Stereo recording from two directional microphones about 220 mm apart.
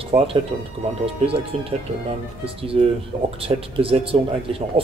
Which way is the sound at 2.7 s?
25° right (ahead or behind).